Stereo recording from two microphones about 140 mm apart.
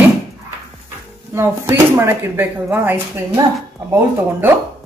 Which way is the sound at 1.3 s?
15° right (ahead or behind).